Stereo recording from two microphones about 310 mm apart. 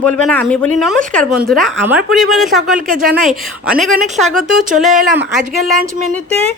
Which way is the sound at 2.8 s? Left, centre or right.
Right.